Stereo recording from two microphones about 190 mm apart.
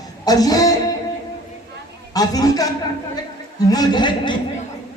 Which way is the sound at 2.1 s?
20° left (ahead or behind).